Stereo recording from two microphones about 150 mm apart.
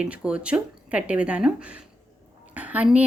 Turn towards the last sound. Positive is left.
turn(degrees=-10)  # may be behind; listen again after turning